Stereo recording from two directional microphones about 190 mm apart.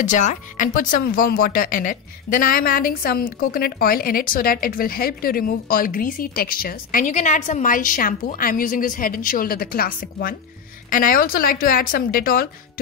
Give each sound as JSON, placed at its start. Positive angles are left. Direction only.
{"t": 0.0, "sound": "speech", "side_deg": 40}